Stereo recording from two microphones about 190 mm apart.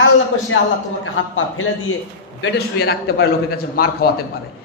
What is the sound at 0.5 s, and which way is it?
A man's voice, 90° left.